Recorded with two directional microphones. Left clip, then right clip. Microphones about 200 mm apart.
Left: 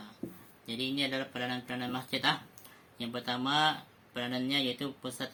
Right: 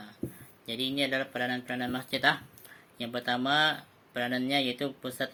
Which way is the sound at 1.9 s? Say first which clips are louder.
Right 4 dB; 60° left (ahead or behind).